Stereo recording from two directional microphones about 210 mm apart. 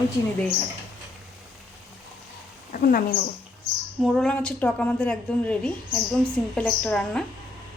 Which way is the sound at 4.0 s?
Centre (ahead or behind).